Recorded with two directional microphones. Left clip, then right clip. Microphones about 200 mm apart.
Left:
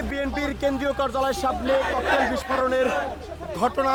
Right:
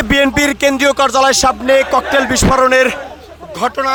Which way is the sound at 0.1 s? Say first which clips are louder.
Right 17 dB; 55° right (ahead or behind).